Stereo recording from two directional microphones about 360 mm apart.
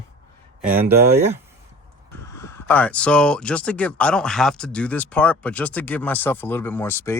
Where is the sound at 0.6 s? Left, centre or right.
Right.